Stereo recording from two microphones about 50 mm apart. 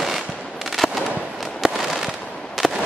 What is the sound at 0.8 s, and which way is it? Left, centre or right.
Fireworks, centre.